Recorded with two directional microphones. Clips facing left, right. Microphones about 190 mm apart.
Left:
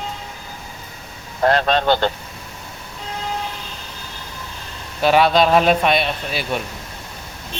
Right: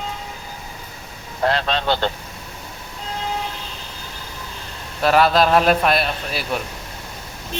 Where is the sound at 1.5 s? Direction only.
50° left (ahead or behind).